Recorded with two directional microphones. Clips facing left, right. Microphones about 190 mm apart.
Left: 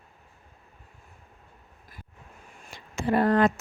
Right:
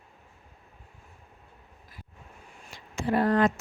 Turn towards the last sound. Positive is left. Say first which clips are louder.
# left 2 dB
turn(degrees=60)  # may be behind; listen again after turning